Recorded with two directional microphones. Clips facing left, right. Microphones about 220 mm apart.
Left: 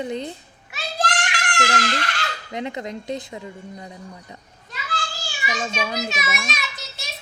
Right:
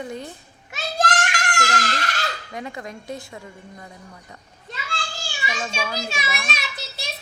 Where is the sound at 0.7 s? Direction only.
45° right (ahead or behind).